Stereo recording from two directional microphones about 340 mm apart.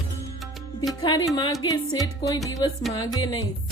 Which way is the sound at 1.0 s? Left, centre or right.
Centre.